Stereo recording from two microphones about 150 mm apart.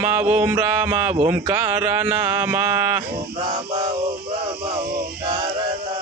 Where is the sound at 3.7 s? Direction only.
40° right (ahead or behind).